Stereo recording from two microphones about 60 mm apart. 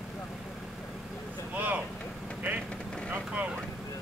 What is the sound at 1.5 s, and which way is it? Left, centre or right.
Speech, right.